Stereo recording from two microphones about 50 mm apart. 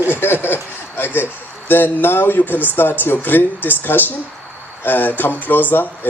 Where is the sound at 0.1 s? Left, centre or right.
Left.